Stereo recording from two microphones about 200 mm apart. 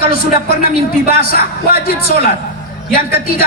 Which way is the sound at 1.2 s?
50° left (ahead or behind).